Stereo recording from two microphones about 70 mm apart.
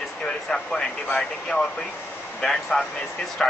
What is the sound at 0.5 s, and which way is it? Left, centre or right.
Speech, centre.